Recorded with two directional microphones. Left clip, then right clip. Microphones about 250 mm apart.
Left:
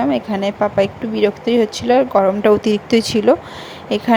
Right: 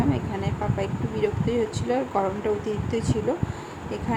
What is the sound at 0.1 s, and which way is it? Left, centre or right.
Speech, left.